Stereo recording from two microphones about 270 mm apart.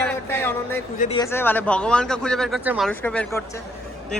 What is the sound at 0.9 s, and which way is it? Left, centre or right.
Speech, left.